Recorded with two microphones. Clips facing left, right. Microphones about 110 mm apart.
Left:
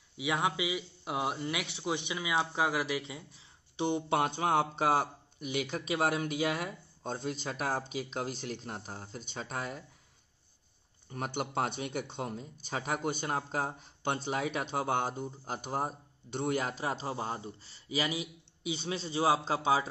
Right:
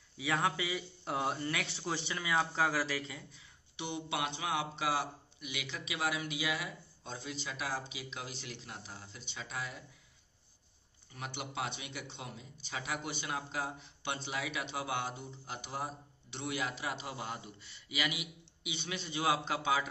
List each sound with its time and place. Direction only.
0.2 s a man's voice: 15° left (ahead or behind)
3.7 s speech: 40° left (ahead or behind)
11.1 s speech: 45° left (ahead or behind)